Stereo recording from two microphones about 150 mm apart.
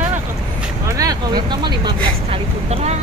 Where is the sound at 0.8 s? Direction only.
25° right (ahead or behind).